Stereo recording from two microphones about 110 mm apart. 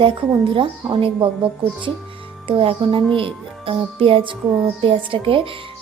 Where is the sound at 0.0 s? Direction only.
50° right (ahead or behind).